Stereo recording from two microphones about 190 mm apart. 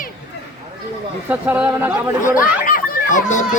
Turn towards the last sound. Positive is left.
turn(degrees=40)  # may be behind; listen again after turning